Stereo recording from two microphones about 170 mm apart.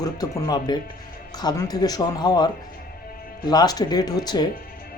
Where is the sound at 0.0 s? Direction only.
25° left (ahead or behind).